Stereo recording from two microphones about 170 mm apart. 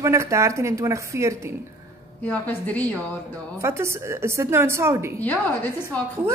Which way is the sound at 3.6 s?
15° right (ahead or behind).